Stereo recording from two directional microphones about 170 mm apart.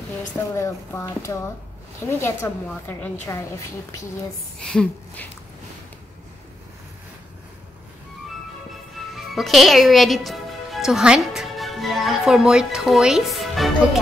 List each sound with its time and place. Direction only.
0.6 s a woman's voice: 15° left (ahead or behind)
4.6 s a woman's voice: 5° left (ahead or behind)
9.1 s a woman's voice: centre (ahead or behind)